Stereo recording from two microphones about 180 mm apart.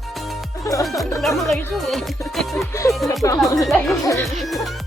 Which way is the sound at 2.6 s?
15° left (ahead or behind).